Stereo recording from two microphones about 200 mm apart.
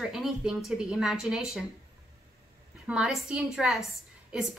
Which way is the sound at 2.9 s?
5° right (ahead or behind).